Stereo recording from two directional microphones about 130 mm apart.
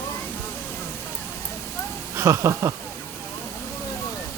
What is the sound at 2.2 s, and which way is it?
Speech, 20° right (ahead or behind).